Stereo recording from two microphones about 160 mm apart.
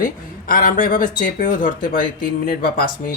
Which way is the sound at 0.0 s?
65° left (ahead or behind).